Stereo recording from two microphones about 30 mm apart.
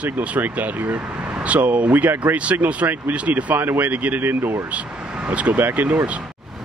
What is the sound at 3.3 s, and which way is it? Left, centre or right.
Speech, right.